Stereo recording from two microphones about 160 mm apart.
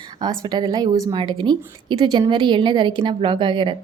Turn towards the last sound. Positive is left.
turn(degrees=-30)  # may be behind; listen again after turning